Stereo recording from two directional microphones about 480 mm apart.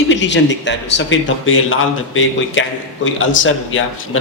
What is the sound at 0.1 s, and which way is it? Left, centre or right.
Speech, left.